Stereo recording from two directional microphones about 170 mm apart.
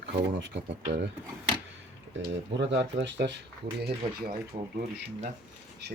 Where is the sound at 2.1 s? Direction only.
90° right.